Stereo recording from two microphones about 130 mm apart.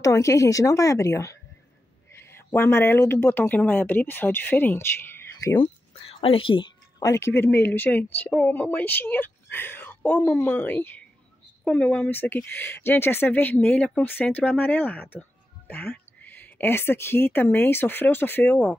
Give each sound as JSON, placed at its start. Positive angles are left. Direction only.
{"t": 0.0, "sound": "a woman's voice", "side_deg": 25}
{"t": 5.6, "sound": "a sound", "side_deg": 45}
{"t": 7.0, "sound": "speech", "side_deg": 25}